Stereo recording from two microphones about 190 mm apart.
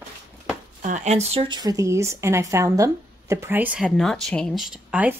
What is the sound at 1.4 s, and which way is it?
Speech, 20° right (ahead or behind).